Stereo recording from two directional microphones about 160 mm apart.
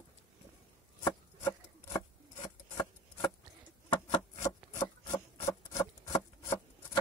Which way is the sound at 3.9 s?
20° left (ahead or behind).